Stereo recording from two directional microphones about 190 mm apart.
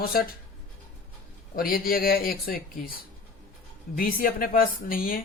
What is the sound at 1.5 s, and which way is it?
Speech, 50° left (ahead or behind).